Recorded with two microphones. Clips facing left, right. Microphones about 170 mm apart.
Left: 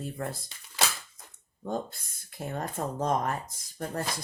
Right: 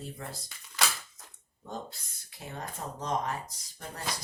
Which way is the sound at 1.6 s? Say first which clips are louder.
Left 7 dB; 50° left (ahead or behind).